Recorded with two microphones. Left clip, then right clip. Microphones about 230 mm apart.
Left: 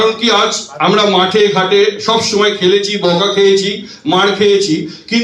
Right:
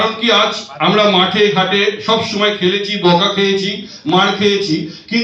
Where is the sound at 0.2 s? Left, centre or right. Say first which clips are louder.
Left 1 dB; left.